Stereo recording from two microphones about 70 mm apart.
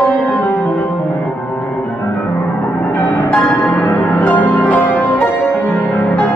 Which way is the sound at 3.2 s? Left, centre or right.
Left.